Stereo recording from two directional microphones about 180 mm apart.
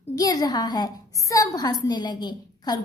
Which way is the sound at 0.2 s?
20° left (ahead or behind).